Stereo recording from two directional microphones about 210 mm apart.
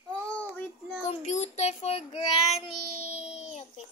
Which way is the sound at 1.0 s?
35° left (ahead or behind).